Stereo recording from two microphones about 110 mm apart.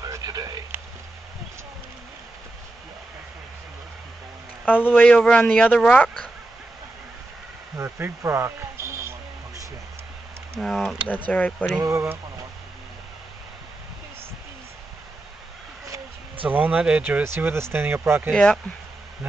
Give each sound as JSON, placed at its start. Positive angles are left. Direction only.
{"t": 0.0, "sound": "a sound", "side_deg": -35}
{"t": 4.8, "sound": "speech", "side_deg": 15}
{"t": 7.7, "sound": "a sound", "side_deg": -25}
{"t": 10.6, "sound": "speech", "side_deg": 5}
{"t": 11.2, "sound": "speech", "side_deg": 15}
{"t": 11.8, "sound": "speech", "side_deg": -25}
{"t": 16.4, "sound": "speech", "side_deg": -15}
{"t": 17.2, "sound": "speech", "side_deg": -20}
{"t": 18.3, "sound": "speech", "side_deg": 10}